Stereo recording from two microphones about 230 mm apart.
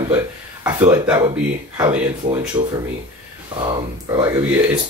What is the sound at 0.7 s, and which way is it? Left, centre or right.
Speech, centre.